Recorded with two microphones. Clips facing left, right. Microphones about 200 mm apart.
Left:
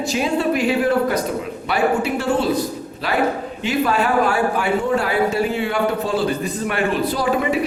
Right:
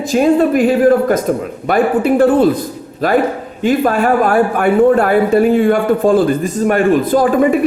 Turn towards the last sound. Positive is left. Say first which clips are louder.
# right 8 dB
turn(degrees=-50)  # may be behind; listen again after turning